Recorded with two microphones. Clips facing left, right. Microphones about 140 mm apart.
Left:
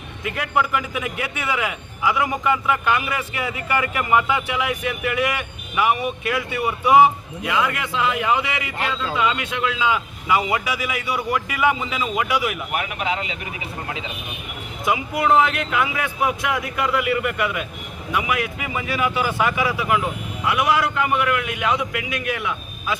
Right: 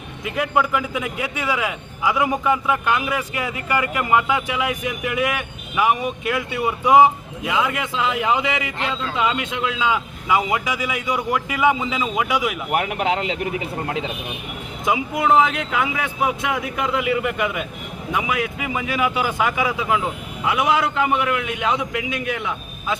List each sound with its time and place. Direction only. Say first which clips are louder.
0.3 s a man's voice: right 2 dB; 10° right (ahead or behind)
12.7 s speech: right 4 dB; 55° right (ahead or behind)
14.8 s a man's voice: right 1 dB; 20° right (ahead or behind)